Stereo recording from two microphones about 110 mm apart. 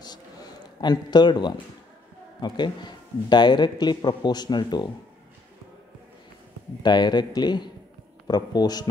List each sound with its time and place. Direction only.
0.0 s a sound: 40° left (ahead or behind)
2.4 s a man's voice: 45° left (ahead or behind)
6.8 s a man's voice: 40° left (ahead or behind)